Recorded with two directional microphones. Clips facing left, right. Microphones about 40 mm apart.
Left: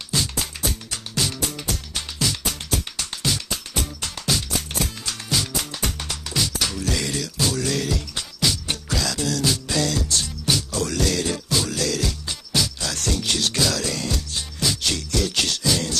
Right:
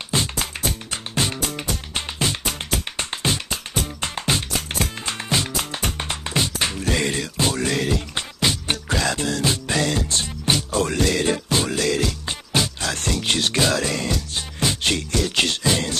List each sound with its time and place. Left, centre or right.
0.1 s music: right